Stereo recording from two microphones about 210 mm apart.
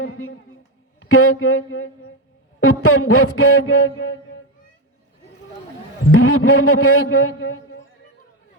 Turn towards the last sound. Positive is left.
turn(degrees=80)